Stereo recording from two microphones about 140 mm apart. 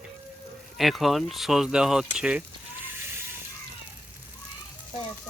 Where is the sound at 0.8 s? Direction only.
Centre (ahead or behind).